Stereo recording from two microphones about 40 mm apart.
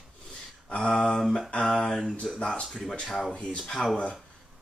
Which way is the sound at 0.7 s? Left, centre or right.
Left.